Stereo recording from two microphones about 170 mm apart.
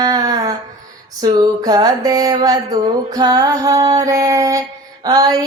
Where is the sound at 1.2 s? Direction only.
25° right (ahead or behind).